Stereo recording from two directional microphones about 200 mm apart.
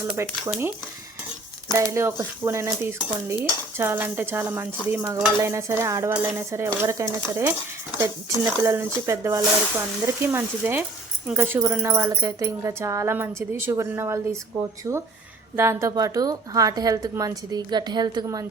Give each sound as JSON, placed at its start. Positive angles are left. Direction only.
{"t": 0.1, "sound": "speech", "side_deg": -10}
{"t": 1.7, "sound": "speech", "side_deg": -15}
{"t": 8.6, "sound": "speech", "side_deg": -15}